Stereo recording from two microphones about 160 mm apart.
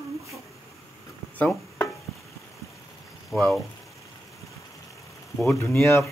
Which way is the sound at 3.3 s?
Centre (ahead or behind).